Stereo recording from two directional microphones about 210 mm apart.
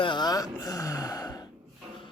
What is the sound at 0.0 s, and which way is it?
Gasp, 20° left (ahead or behind).